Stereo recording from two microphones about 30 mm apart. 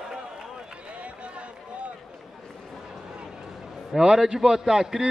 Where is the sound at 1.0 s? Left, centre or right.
Right.